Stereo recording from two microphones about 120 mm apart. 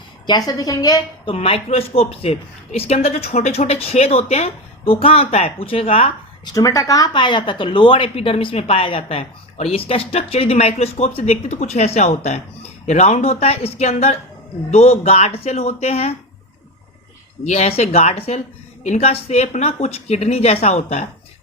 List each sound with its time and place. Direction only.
0.3 s a woman's voice: 35° left (ahead or behind)
1.2 s a woman's voice: 50° left (ahead or behind)
6.4 s a woman's voice: 30° left (ahead or behind); by 16.1 s 60° left (ahead or behind)
17.4 s a woman's voice: 70° left (ahead or behind)